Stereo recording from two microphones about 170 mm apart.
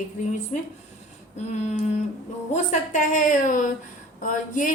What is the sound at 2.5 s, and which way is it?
A woman's voice, 50° left (ahead or behind).